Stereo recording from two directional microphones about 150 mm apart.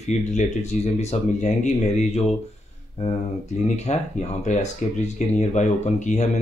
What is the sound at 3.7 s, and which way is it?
Speech, 45° left (ahead or behind).